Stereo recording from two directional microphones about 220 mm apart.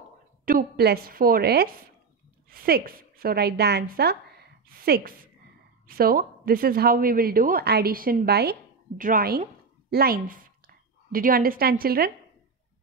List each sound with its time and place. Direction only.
0.5 s a woman's voice: 45° right (ahead or behind)